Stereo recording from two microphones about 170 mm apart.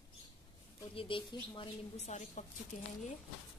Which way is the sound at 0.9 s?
30° left (ahead or behind).